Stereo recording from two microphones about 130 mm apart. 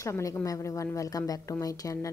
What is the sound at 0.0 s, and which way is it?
A woman's voice, 25° left (ahead or behind).